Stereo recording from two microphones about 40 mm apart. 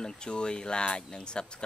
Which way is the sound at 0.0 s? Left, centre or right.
Left.